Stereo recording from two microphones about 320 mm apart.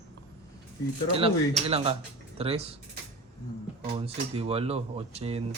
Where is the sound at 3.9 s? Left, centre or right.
Centre.